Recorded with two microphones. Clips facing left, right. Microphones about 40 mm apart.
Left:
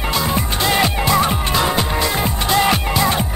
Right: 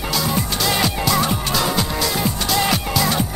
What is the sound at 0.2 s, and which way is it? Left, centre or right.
Music, left.